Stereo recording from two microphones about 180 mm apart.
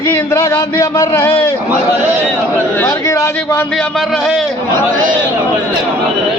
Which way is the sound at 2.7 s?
10° left (ahead or behind).